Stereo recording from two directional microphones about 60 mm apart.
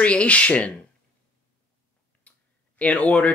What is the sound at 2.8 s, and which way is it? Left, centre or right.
Speech, left.